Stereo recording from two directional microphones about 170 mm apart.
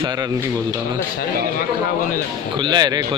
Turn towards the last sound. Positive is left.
turn(degrees=-25)  # may be behind; listen again after turning